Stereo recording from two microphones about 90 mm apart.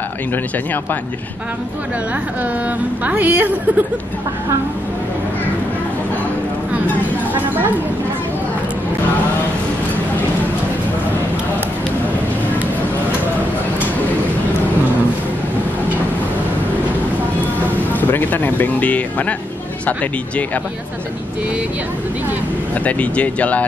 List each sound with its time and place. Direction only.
3.1 s a woman's voice: 15° right (ahead or behind)
7.3 s a woman's voice: 20° right (ahead or behind)
17.6 s speech: 20° left (ahead or behind)
22.8 s speech: 15° left (ahead or behind)